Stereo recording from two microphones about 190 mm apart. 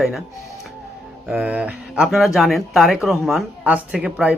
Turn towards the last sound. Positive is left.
turn(degrees=-5)  # may be behind; listen again after turning